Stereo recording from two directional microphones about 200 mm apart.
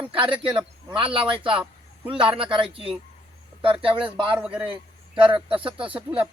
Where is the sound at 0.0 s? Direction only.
25° right (ahead or behind).